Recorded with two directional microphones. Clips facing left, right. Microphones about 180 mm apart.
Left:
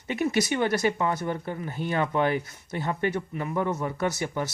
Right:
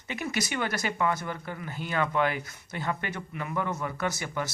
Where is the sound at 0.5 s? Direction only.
25° left (ahead or behind).